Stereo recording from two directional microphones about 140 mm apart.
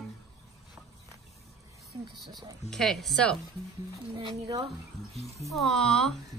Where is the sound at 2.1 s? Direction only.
Centre (ahead or behind).